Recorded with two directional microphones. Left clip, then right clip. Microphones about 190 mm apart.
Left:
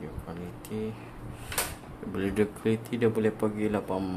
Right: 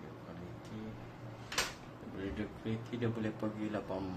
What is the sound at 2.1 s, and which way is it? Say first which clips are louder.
Speech: left 14 dB; 55° left (ahead or behind).